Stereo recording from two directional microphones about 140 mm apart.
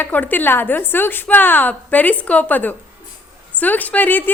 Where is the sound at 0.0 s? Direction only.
10° left (ahead or behind).